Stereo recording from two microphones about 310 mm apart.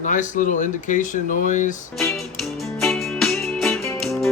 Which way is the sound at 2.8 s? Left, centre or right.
Centre.